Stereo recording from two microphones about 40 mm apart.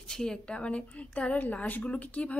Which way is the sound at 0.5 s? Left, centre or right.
Left.